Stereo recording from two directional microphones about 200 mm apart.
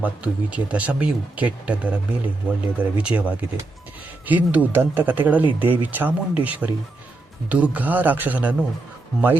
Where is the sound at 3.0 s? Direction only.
5° right (ahead or behind).